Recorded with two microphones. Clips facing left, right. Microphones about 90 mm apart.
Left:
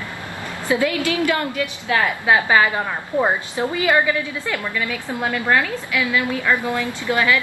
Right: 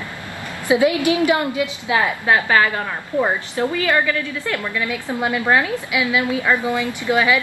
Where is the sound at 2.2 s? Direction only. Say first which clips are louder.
Left 2 dB; 15° left (ahead or behind).